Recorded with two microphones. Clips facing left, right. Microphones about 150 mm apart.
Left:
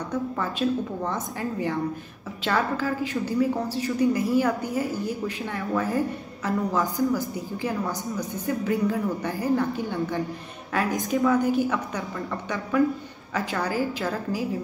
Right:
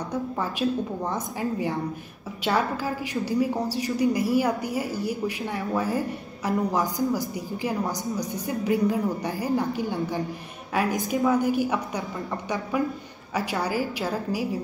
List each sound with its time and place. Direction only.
0.4 s a woman's voice: 10° right (ahead or behind)